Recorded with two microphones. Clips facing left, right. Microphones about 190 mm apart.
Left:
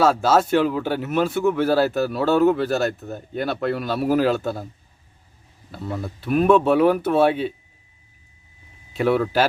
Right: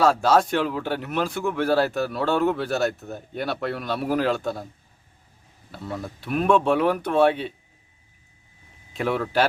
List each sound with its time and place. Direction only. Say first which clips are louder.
0.0 s speech: left 1 dB; centre (ahead or behind)
5.7 s speech: left 3 dB; centre (ahead or behind)
8.9 s speech: left 5 dB; centre (ahead or behind)